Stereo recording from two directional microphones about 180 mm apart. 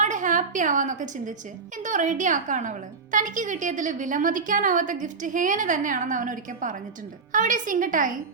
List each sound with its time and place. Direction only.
0.0 s a woman's voice: 45° right (ahead or behind)